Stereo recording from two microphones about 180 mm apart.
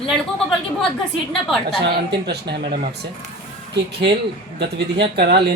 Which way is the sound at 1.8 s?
65° right (ahead or behind).